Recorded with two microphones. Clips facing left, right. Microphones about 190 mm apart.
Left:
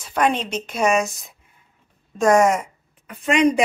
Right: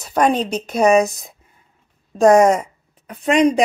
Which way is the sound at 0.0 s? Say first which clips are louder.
Right 4 dB; 40° right (ahead or behind).